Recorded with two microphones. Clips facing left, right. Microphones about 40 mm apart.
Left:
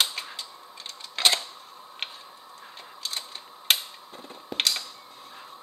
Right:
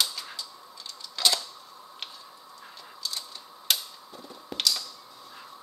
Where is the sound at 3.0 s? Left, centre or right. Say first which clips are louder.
Left 1 dB; left.